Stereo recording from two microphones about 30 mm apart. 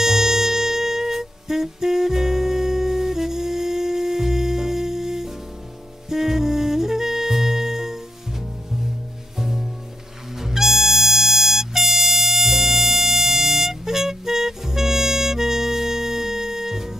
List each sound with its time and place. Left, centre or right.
0.0 s music: centre